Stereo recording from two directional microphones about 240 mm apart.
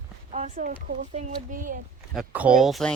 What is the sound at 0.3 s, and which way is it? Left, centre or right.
Speech, right.